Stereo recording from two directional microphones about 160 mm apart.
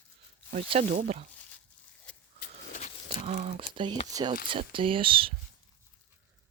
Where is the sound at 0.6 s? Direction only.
40° right (ahead or behind).